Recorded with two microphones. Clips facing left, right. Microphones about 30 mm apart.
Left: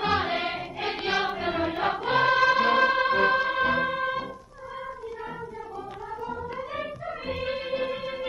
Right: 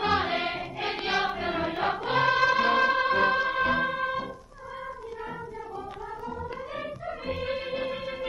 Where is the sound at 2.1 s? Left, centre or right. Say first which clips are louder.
Left 2 dB; left.